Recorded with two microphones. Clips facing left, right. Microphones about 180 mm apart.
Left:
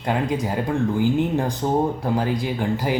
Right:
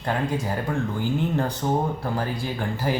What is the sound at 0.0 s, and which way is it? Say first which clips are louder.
Speech: left 3 dB; 15° left (ahead or behind).